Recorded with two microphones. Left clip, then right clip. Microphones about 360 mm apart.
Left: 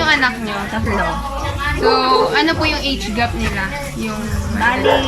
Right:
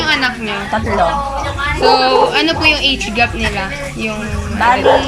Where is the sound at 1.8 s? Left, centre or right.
Centre.